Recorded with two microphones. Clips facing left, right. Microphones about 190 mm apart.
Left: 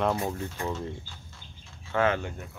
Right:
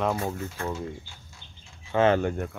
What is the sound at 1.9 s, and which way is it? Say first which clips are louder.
Speech: right 4 dB; 30° right (ahead or behind).